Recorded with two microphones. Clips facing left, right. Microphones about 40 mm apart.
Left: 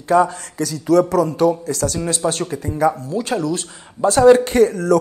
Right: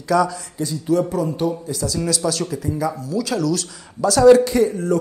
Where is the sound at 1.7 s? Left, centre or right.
Left.